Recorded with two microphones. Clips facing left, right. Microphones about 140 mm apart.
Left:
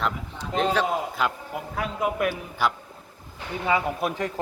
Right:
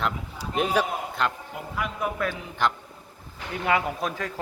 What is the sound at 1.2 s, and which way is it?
Speech, 5° left (ahead or behind).